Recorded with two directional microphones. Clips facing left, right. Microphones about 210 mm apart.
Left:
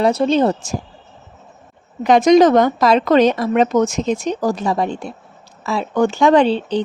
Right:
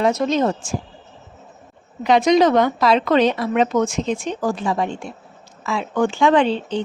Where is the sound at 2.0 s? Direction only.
45° left (ahead or behind).